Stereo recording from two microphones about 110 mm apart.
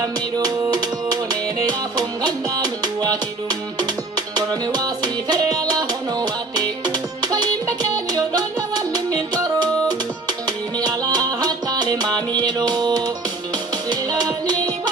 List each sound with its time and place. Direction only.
0.0 s music: 30° right (ahead or behind)